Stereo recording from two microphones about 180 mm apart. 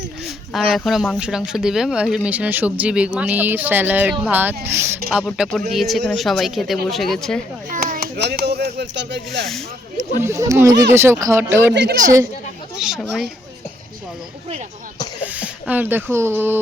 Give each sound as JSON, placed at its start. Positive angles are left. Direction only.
{"t": 0.3, "sound": "speech", "side_deg": 0}
{"t": 5.1, "sound": "speech", "side_deg": 0}
{"t": 7.7, "sound": "speech", "side_deg": -50}
{"t": 10.2, "sound": "speech", "side_deg": -15}
{"t": 11.7, "sound": "a woman's voice", "side_deg": -70}
{"t": 12.8, "sound": "speech", "side_deg": 0}
{"t": 15.2, "sound": "speech", "side_deg": -10}